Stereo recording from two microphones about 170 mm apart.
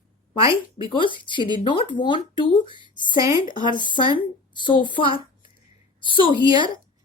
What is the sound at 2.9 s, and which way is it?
A woman's voice, 25° left (ahead or behind).